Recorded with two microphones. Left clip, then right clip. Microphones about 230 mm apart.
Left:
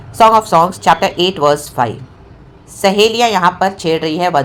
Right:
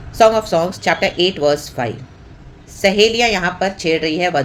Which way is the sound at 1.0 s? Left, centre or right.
Centre.